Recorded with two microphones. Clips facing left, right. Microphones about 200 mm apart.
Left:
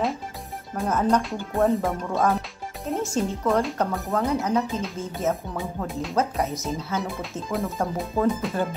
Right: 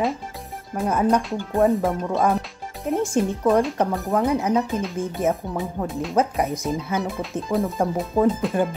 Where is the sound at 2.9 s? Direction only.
15° right (ahead or behind).